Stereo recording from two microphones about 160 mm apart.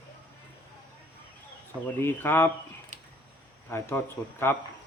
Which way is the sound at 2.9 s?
50° right (ahead or behind).